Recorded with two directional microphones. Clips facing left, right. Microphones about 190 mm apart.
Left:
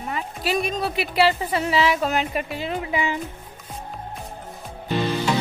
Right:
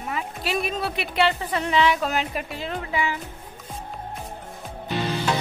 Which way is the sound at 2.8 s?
15° left (ahead or behind).